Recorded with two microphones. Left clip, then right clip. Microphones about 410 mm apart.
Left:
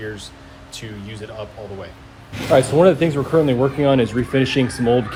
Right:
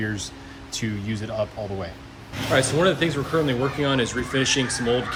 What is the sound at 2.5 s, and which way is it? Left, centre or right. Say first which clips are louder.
Speech: left 7 dB; centre.